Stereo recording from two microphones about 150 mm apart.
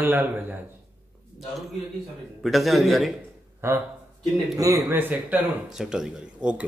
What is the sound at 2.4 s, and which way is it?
Speech, centre (ahead or behind).